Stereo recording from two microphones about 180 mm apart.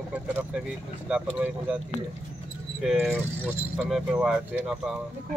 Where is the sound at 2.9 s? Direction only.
10° right (ahead or behind).